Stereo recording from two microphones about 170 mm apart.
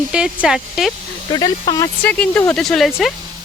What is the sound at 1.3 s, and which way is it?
Speech, 25° left (ahead or behind).